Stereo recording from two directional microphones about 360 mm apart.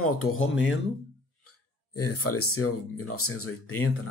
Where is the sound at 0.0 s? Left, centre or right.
Left.